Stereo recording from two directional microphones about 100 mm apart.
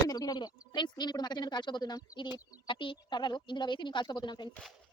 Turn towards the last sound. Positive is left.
turn(degrees=45)  # may be behind; listen again after turning